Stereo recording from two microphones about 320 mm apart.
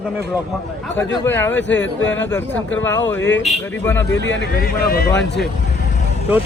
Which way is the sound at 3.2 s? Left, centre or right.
Left.